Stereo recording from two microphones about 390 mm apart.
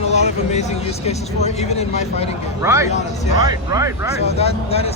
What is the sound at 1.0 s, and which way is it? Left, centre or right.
Speech, centre.